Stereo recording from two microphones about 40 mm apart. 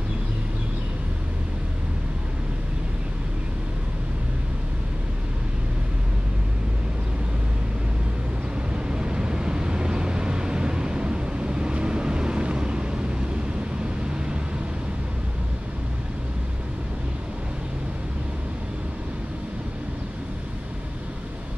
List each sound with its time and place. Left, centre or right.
8.7 s vehicle: right
14.1 s vehicle: right